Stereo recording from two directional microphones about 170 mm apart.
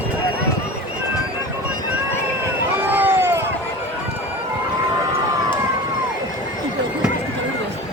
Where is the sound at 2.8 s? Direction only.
10° right (ahead or behind).